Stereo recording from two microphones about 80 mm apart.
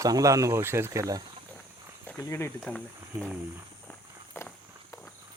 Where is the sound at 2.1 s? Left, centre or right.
Left.